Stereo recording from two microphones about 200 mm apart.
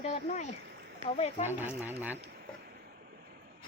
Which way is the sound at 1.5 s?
10° right (ahead or behind).